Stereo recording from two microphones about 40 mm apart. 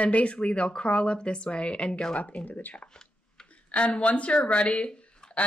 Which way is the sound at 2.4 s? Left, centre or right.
Left.